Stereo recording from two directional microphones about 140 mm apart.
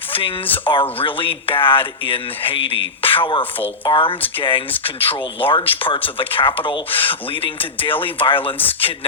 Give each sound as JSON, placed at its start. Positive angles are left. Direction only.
{"t": 0.1, "sound": "a sound", "side_deg": 40}
{"t": 0.4, "sound": "speech", "side_deg": 15}
{"t": 0.7, "sound": "speech", "side_deg": 40}
{"t": 8.6, "sound": "speech", "side_deg": 15}